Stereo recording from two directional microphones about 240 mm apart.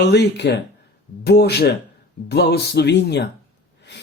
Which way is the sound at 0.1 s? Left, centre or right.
Left.